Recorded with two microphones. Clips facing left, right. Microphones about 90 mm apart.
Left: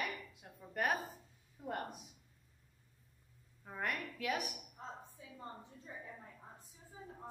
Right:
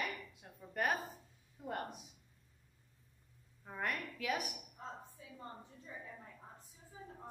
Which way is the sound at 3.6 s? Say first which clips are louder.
Even; centre (ahead or behind).